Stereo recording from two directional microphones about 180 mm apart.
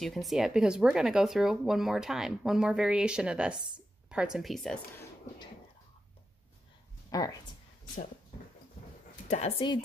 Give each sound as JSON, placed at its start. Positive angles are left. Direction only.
{"t": 0.0, "sound": "speech", "side_deg": 0}
{"t": 7.1, "sound": "speech", "side_deg": 20}
{"t": 9.3, "sound": "speech", "side_deg": 35}